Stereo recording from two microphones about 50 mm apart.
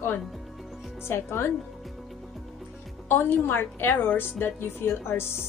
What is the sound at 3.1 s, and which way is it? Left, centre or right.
A woman's voice, left.